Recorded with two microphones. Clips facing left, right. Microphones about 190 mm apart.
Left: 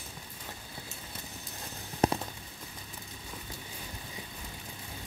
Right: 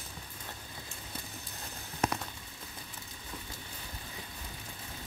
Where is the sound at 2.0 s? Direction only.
35° left (ahead or behind).